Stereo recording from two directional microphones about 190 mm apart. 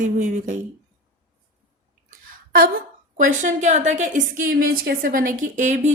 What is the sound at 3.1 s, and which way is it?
A woman's voice, 45° right (ahead or behind).